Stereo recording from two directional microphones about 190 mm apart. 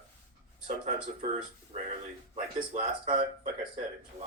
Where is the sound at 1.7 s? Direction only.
35° right (ahead or behind).